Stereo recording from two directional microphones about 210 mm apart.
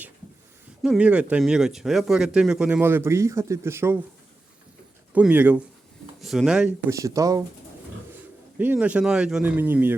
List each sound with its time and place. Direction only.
0.8 s speech: 5° right (ahead or behind)
5.1 s speech: 5° right (ahead or behind)
6.9 s speech: 15° right (ahead or behind)
8.5 s speech: 5° right (ahead or behind)